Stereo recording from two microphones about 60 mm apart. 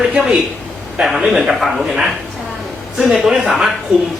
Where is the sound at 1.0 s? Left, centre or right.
Centre.